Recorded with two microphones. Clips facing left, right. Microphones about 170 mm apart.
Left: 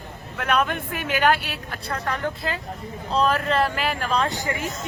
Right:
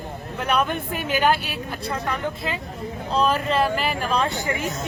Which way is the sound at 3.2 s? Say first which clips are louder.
Even; 5° right (ahead or behind).